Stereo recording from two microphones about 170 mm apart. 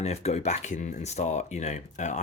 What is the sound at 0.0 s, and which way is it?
Speech, 40° left (ahead or behind).